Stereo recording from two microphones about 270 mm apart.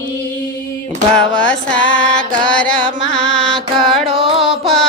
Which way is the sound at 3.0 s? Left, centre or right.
Left.